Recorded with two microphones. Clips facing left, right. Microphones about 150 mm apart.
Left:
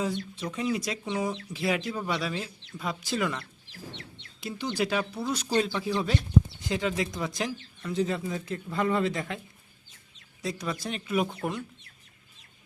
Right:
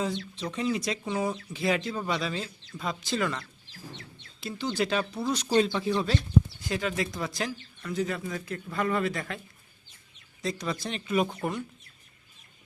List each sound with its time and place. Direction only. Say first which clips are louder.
0.5 s speech: even; 5° left (ahead or behind)
1.0 s speech: right 1 dB; 10° right (ahead or behind)
1.5 s speech: right 1 dB; 10° left (ahead or behind)
3.7 s bird: left 1 dB; 65° left (ahead or behind)
4.4 s speech: even; 15° left (ahead or behind)
10.4 s speech: right 1 dB; 10° left (ahead or behind)